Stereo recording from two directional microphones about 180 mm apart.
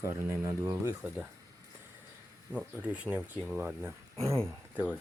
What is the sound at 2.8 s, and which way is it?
Speech, 10° right (ahead or behind).